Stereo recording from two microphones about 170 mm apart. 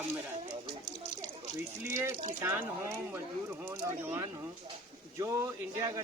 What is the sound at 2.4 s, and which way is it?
Speech, 15° right (ahead or behind).